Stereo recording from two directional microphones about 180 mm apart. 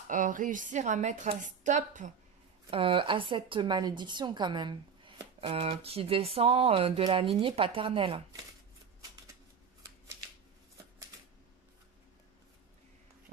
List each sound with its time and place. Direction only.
0.1 s a woman's voice: 45° right (ahead or behind)
2.7 s speech: 30° right (ahead or behind)